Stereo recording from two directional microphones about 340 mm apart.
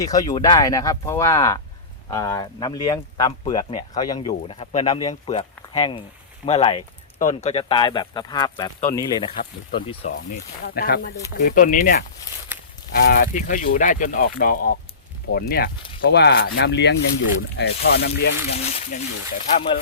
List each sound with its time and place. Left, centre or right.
0.0 s speech: centre
10.6 s speech: left
18.5 s speech: centre